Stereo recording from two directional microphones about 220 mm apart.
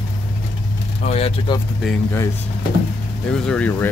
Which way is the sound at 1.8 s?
10° left (ahead or behind).